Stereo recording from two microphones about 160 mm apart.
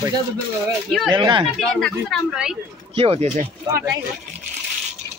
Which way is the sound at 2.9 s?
35° right (ahead or behind).